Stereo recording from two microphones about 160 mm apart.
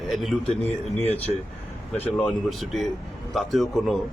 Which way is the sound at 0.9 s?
40° right (ahead or behind).